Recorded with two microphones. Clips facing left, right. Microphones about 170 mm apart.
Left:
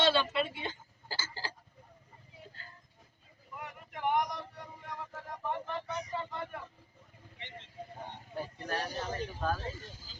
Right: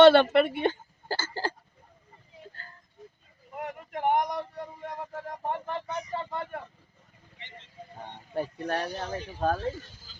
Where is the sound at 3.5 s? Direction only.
55° right (ahead or behind).